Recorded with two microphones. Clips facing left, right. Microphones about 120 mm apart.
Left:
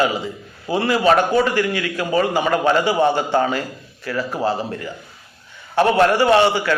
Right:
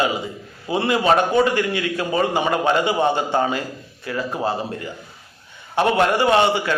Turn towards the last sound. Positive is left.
turn(degrees=-25)  # may be behind; listen again after turning